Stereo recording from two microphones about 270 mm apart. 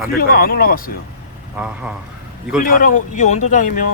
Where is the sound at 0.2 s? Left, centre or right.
Left.